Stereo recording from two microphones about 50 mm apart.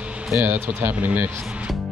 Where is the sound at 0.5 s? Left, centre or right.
Right.